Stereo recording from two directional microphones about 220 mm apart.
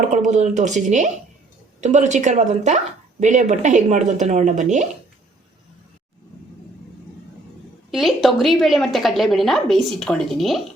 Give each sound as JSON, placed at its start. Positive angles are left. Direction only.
{"t": 0.1, "sound": "speech", "side_deg": -35}
{"t": 7.9, "sound": "a woman's voice", "side_deg": 0}